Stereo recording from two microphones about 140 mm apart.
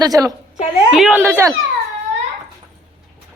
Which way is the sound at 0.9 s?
5° right (ahead or behind).